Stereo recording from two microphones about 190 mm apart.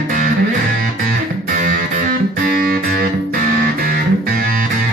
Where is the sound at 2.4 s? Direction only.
45° right (ahead or behind).